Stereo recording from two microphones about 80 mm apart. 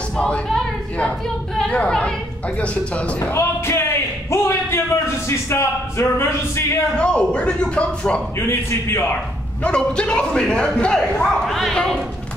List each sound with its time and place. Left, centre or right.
1.6 s a woman's voice: centre
3.3 s speech: left
7.0 s a man's voice: centre
8.4 s speech: left
9.6 s a man's voice: centre